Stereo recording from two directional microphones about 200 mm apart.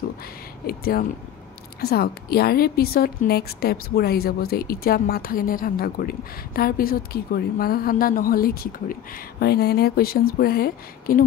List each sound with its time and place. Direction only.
0.7 s a woman's voice: 50° left (ahead or behind)